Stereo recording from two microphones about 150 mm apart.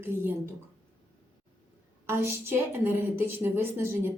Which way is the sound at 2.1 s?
15° right (ahead or behind).